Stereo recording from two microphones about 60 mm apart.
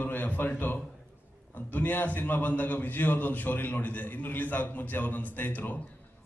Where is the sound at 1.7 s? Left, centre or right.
Left.